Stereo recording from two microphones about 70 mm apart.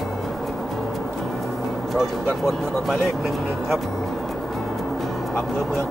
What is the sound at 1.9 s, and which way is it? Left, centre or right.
Speech, centre.